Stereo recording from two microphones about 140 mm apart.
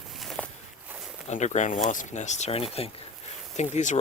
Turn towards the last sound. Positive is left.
turn(degrees=55)  # may be behind; listen again after turning